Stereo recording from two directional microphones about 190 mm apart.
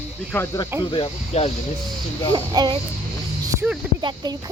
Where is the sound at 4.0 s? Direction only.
25° right (ahead or behind).